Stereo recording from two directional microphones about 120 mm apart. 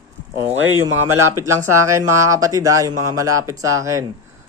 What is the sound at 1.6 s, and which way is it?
Speech, 25° right (ahead or behind).